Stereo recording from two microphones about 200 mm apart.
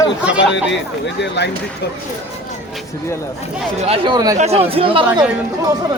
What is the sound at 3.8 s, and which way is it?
Speech, 25° right (ahead or behind).